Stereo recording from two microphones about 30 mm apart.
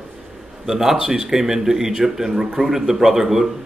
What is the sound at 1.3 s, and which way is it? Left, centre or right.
A man's voice, centre.